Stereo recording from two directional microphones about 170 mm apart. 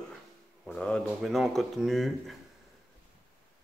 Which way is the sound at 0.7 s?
5° left (ahead or behind).